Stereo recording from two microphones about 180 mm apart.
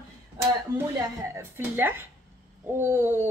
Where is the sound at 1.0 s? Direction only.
15° right (ahead or behind).